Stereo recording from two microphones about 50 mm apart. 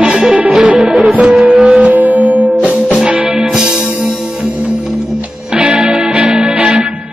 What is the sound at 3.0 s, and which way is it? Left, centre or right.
Music, centre.